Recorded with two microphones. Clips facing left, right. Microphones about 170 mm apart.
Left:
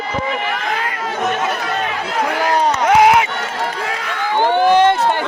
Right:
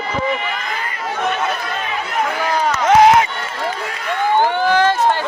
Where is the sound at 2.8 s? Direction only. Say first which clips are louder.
Right 2 dB; 10° left (ahead or behind).